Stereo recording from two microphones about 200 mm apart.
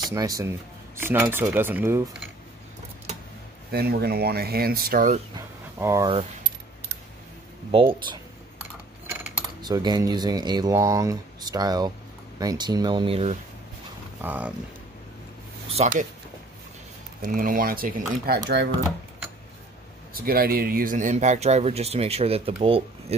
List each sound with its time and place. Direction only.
0.1 s speech: 15° right (ahead or behind)
3.7 s speech: 50° right (ahead or behind)
5.8 s speech: 15° right (ahead or behind)
7.7 s speech: 25° right (ahead or behind)
9.0 s coin: 10° right (ahead or behind)
9.6 s speech: 20° right (ahead or behind)
14.2 s speech: 10° right (ahead or behind)
15.7 s speech: 35° right (ahead or behind)
17.2 s speech: 45° right (ahead or behind)
20.2 s speech: 50° right (ahead or behind); by 23.1 s 30° right (ahead or behind)